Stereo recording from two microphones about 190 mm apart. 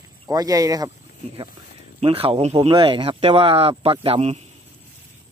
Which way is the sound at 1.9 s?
30° right (ahead or behind).